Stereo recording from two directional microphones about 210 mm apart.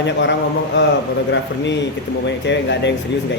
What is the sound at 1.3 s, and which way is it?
A man's voice, 60° left (ahead or behind).